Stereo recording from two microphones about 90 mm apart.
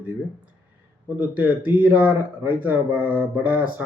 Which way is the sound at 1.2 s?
20° right (ahead or behind).